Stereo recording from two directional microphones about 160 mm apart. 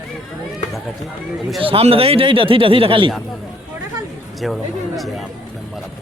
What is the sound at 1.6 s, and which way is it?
Speech, 35° right (ahead or behind).